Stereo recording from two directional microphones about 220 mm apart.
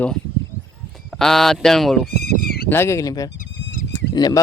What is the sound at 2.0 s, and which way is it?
Bleat, 45° left (ahead or behind).